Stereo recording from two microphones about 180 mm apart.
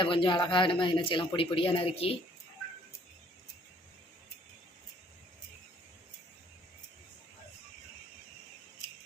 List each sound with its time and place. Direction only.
0.0 s speech: 30° left (ahead or behind)